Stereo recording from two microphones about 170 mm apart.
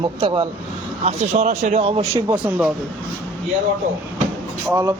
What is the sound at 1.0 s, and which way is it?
A man's voice, 40° right (ahead or behind).